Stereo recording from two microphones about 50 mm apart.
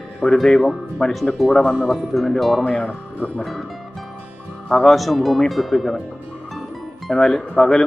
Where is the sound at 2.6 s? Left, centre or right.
Left.